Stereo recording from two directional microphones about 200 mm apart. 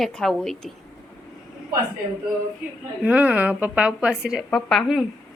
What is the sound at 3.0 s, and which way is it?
A woman's voice, 5° right (ahead or behind).